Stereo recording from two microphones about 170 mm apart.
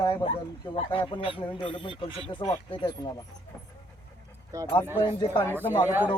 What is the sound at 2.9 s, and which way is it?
Speech, 25° left (ahead or behind).